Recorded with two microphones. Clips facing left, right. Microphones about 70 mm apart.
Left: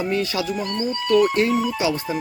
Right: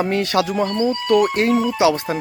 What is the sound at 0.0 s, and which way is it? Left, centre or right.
Speech, right.